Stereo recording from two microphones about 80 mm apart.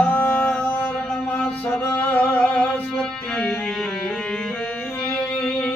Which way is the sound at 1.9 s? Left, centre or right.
Left.